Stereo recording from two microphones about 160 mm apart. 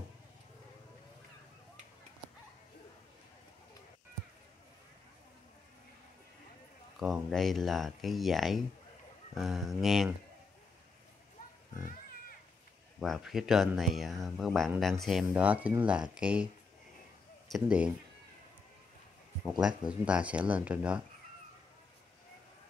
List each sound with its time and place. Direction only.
7.2 s speech: centre (ahead or behind)
13.0 s speech: centre (ahead or behind)
17.5 s speech: 5° right (ahead or behind)
19.6 s speech: 5° right (ahead or behind)